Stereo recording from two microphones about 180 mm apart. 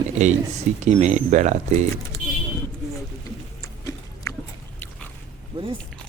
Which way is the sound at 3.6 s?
20° left (ahead or behind).